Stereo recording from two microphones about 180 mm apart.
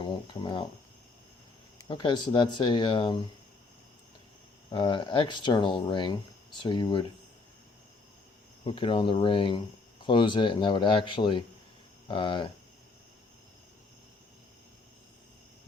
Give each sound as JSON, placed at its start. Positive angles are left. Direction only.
{"t": 0.0, "sound": "speech", "side_deg": 25}
{"t": 1.9, "sound": "speech", "side_deg": 25}
{"t": 4.7, "sound": "speech", "side_deg": 25}
{"t": 8.6, "sound": "speech", "side_deg": 30}